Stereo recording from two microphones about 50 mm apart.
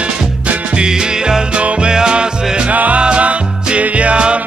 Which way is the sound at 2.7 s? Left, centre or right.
Right.